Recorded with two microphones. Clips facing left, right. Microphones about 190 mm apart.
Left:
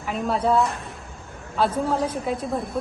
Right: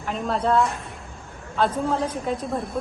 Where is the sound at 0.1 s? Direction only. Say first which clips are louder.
Left 1 dB; 5° left (ahead or behind).